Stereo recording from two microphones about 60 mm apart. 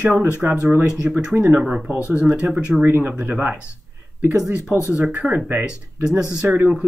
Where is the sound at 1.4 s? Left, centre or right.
Right.